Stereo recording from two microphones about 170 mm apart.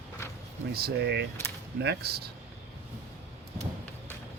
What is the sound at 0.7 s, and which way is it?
Speech, 65° right (ahead or behind).